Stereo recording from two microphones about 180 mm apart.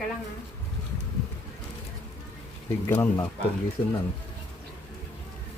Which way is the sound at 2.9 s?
10° left (ahead or behind).